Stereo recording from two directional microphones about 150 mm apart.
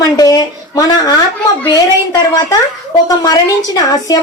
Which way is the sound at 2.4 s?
25° left (ahead or behind).